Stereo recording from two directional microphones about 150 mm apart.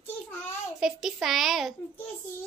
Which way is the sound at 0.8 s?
Centre (ahead or behind).